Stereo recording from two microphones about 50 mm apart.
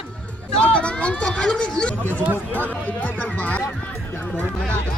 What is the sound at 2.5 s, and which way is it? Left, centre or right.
Speech, left.